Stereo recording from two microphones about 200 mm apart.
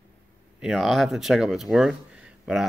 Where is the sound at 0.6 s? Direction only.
Centre (ahead or behind).